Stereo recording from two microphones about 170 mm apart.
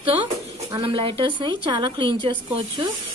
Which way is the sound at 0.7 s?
30° right (ahead or behind).